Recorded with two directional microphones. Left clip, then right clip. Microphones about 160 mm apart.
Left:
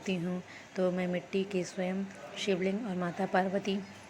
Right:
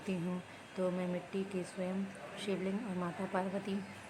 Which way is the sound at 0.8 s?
20° left (ahead or behind).